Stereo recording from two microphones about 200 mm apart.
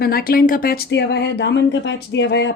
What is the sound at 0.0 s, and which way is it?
Speech, 50° left (ahead or behind).